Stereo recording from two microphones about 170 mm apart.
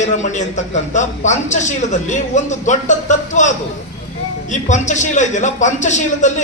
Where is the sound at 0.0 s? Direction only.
45° left (ahead or behind).